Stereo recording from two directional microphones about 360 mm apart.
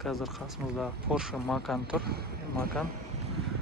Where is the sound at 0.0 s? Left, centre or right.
Centre.